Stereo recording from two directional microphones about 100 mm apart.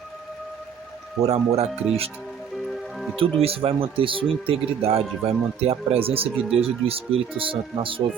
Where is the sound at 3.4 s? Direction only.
70° right (ahead or behind).